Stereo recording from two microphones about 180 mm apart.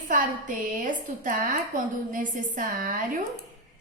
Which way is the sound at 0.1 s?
50° right (ahead or behind).